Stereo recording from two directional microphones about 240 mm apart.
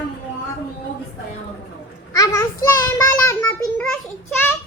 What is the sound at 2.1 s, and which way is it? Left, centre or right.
Child singing, centre.